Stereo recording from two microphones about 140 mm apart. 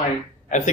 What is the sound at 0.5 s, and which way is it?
Speech, 60° left (ahead or behind).